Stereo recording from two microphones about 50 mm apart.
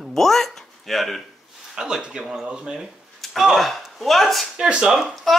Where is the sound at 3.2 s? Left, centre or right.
Centre.